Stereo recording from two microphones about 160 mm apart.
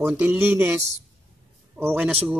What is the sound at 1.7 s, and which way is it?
Speech, 10° right (ahead or behind).